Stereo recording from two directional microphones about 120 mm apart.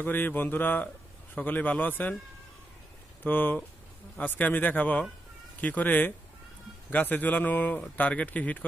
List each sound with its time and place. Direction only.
0.0 s speech: 15° left (ahead or behind)
3.3 s speech: 15° left (ahead or behind)